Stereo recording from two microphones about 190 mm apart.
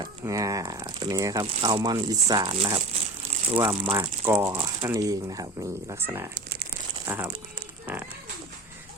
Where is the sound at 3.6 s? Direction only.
15° right (ahead or behind).